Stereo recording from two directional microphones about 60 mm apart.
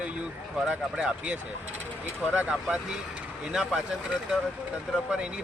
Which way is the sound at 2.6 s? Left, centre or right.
Centre.